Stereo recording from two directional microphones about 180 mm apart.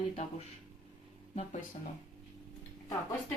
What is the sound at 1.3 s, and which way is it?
Speech, 45° left (ahead or behind).